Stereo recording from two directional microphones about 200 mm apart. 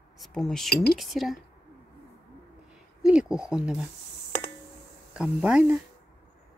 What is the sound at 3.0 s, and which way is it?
Speech, 5° right (ahead or behind).